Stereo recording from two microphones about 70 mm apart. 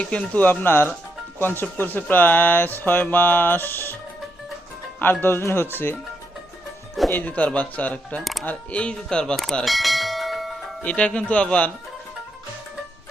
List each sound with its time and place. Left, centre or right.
0.0 s mantra: left
0.6 s speech: left
1.8 s mantra: left
4.9 s speech: left
7.1 s mantra: left
8.2 s speech: centre
8.4 s speech: centre
9.6 s bell: centre
10.8 s speech: centre